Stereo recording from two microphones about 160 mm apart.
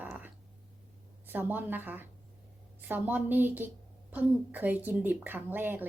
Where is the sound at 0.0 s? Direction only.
10° right (ahead or behind).